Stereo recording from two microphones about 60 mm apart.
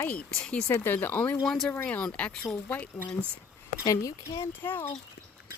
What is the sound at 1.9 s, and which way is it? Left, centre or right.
Speech, left.